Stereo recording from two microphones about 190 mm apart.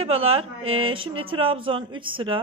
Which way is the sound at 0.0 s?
30° right (ahead or behind).